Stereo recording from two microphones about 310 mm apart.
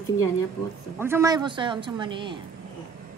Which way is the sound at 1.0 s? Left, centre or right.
Centre.